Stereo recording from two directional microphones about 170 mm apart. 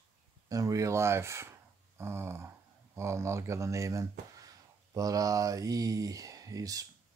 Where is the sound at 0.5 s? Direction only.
20° right (ahead or behind).